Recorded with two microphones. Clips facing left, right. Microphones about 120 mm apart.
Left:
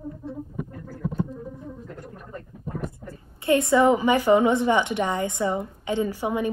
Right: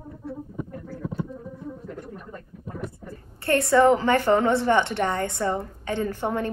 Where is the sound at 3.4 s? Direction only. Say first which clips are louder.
Even; 15° left (ahead or behind).